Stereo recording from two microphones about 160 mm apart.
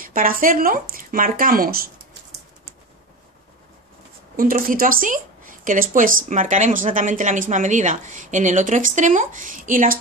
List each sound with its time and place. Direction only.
0.0 s speech: 60° right (ahead or behind)
4.4 s speech: 60° right (ahead or behind)